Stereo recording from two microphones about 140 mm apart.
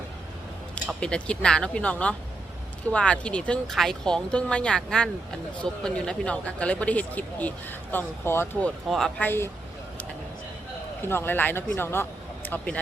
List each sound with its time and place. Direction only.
0.9 s speech: 5° left (ahead or behind)
8.9 s speech: 5° left (ahead or behind)
11.0 s speech: 15° left (ahead or behind)